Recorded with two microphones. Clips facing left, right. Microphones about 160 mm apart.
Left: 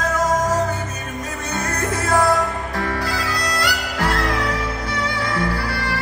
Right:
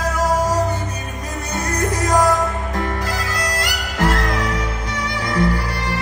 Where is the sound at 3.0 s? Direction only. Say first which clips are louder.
Even; 45° right (ahead or behind).